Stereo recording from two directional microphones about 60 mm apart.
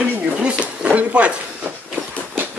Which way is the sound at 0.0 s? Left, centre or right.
Centre.